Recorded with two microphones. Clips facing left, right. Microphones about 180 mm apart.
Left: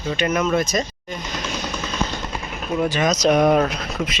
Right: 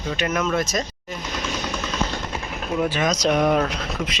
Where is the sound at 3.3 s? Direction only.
40° left (ahead or behind).